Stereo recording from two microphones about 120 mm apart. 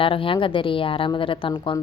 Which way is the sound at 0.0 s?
45° left (ahead or behind).